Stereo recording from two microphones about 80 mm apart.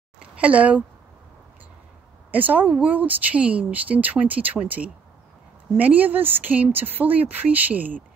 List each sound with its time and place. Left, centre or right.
0.2 s speech: centre
2.3 s speech: right